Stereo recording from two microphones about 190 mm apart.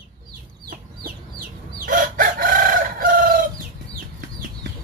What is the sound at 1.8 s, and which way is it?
Chicken, 45° right (ahead or behind).